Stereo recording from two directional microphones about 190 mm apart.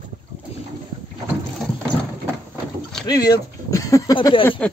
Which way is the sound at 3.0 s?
20° left (ahead or behind).